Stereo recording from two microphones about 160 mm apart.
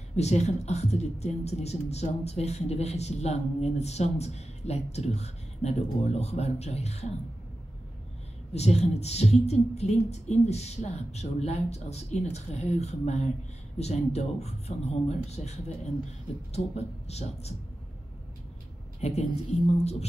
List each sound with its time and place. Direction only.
0.1 s speech: 45° left (ahead or behind)
8.5 s speech: 40° left (ahead or behind)
16.5 s speech: 40° left (ahead or behind)
18.9 s a woman's voice: 40° left (ahead or behind)